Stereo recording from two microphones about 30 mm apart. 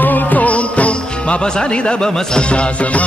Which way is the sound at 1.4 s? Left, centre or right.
Left.